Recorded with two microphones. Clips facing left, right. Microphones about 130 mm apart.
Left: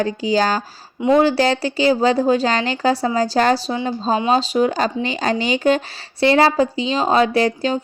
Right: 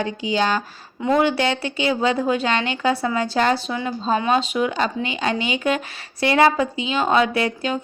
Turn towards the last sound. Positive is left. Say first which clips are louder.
# left 5 dB
turn(degrees=35)  # may be behind; listen again after turning